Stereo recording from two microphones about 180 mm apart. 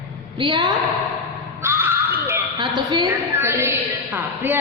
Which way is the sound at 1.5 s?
15° right (ahead or behind).